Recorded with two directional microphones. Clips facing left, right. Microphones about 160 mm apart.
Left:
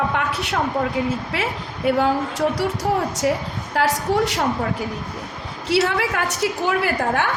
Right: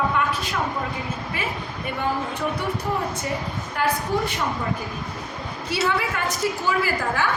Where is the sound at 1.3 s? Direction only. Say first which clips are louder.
Left 3 dB; 90° left.